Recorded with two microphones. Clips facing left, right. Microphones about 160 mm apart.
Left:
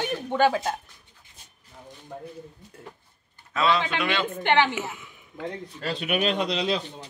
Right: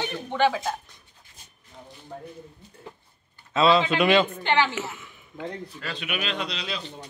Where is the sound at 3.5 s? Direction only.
25° right (ahead or behind).